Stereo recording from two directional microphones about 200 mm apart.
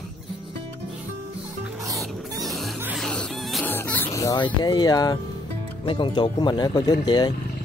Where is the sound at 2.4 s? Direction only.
Centre (ahead or behind); by 5.2 s 20° left (ahead or behind).